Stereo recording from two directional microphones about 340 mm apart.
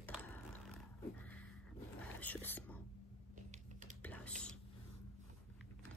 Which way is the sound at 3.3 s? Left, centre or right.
Right.